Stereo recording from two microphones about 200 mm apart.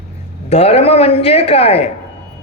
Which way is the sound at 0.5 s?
30° left (ahead or behind).